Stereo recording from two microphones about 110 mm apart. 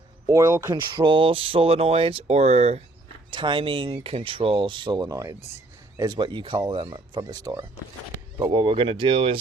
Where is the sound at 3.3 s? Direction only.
50° right (ahead or behind); by 5.4 s 30° right (ahead or behind).